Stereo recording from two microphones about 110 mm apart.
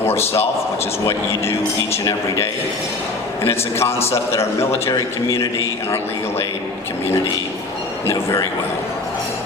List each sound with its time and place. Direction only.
0.0 s a man's voice: 20° left (ahead or behind)
3.4 s a man's voice: 25° left (ahead or behind)
8.1 s a man's voice: 35° left (ahead or behind)